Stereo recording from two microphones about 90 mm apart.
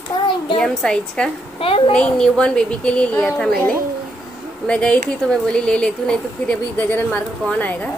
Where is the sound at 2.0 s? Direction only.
10° left (ahead or behind).